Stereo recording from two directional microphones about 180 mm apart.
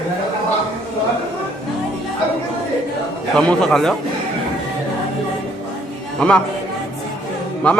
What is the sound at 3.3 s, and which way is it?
Music, 5° left (ahead or behind).